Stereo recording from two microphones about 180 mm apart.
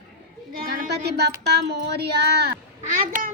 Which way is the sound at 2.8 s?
50° right (ahead or behind).